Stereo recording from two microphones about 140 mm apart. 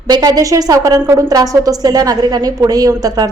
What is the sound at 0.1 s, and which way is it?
A woman's voice, 30° right (ahead or behind).